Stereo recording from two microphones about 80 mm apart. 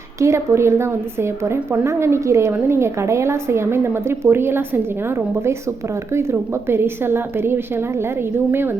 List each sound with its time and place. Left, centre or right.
0.2 s a woman's voice: right